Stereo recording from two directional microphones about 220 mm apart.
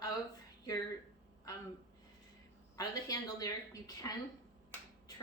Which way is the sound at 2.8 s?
15° left (ahead or behind).